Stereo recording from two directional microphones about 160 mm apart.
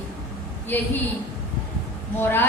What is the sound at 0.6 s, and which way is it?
Speech, 10° left (ahead or behind).